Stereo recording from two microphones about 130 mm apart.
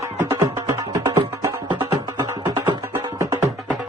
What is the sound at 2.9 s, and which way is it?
Music, 25° right (ahead or behind).